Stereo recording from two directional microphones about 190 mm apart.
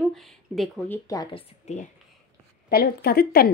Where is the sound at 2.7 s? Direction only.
55° left (ahead or behind).